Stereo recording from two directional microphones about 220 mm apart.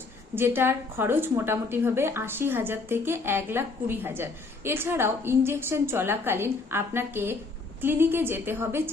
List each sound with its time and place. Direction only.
0.3 s a woman's voice: 10° right (ahead or behind)